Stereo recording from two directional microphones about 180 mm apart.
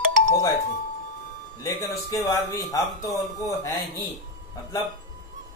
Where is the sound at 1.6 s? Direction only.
20° left (ahead or behind).